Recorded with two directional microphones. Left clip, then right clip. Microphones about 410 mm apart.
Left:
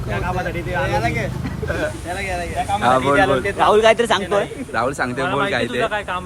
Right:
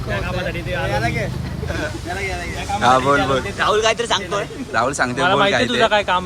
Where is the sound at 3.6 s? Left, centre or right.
Centre.